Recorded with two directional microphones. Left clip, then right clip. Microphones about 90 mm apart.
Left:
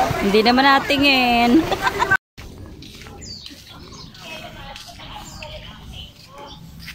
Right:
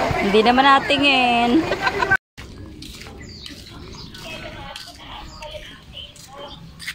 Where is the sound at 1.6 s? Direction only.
5° left (ahead or behind).